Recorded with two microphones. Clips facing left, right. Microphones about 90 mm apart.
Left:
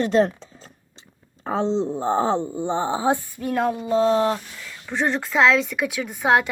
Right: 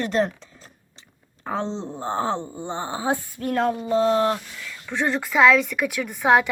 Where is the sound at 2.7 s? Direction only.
25° left (ahead or behind).